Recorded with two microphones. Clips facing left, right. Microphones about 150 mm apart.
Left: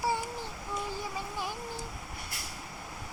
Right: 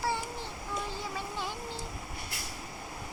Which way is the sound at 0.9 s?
15° left (ahead or behind).